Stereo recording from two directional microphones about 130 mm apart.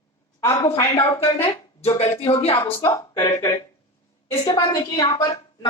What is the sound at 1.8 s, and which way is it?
Speech, 50° left (ahead or behind).